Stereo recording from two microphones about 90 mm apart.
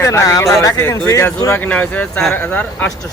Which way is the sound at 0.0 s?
35° left (ahead or behind).